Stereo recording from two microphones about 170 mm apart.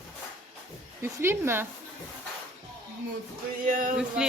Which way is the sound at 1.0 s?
15° right (ahead or behind).